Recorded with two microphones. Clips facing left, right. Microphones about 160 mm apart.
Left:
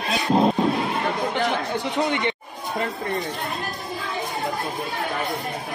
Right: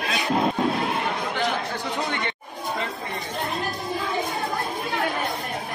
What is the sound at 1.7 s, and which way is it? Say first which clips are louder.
Chatter: left 4 dB; 20° left (ahead or behind).